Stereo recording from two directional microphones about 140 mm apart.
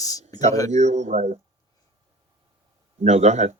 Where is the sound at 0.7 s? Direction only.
55° right (ahead or behind).